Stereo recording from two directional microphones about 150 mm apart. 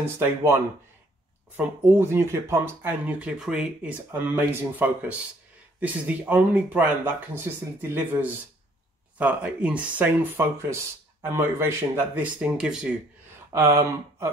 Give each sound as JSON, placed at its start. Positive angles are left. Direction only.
{"t": 0.0, "sound": "speech", "side_deg": -15}
{"t": 1.6, "sound": "speech", "side_deg": -15}
{"t": 13.5, "sound": "speech", "side_deg": -20}